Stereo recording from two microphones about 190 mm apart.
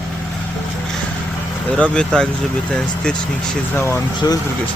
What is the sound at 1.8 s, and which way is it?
Speech, 5° left (ahead or behind).